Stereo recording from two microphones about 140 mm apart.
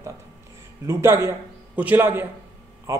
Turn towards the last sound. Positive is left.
turn(degrees=-20)  # may be behind; listen again after turning